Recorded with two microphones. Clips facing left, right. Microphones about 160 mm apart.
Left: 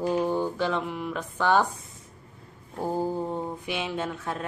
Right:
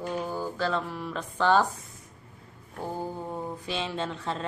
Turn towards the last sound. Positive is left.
turn(degrees=10)  # may be behind; listen again after turning